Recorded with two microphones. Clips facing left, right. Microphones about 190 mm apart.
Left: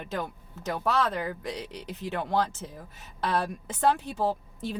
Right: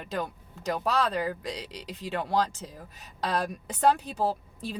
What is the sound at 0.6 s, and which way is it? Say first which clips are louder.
Speech: even; 15° right (ahead or behind).